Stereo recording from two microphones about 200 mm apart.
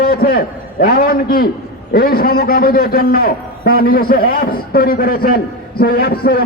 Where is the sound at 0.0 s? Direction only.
50° left (ahead or behind).